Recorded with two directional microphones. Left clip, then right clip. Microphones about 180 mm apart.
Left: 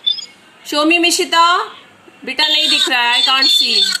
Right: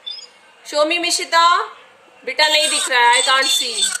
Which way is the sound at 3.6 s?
35° right (ahead or behind).